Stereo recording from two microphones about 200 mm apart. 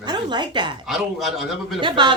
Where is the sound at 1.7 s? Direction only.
25° right (ahead or behind).